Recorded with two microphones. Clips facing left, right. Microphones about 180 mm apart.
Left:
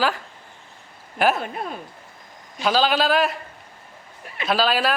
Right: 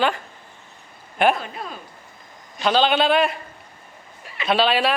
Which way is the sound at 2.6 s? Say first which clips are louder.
Right 1 dB; 5° left (ahead or behind).